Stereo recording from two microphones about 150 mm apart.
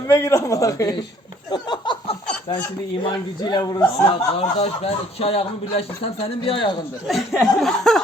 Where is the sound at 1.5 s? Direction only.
30° left (ahead or behind).